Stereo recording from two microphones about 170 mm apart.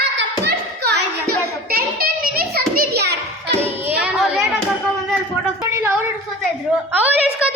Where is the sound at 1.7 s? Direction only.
60° right (ahead or behind).